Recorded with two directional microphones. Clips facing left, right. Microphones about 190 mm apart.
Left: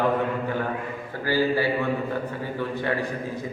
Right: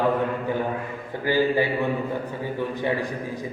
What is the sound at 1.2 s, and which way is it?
Speech, 20° right (ahead or behind).